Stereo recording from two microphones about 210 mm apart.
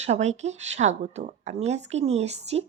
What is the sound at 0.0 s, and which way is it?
Speech, 35° right (ahead or behind).